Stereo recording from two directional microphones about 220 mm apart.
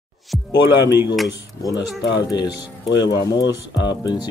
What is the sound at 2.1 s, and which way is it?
Speech, 20° left (ahead or behind).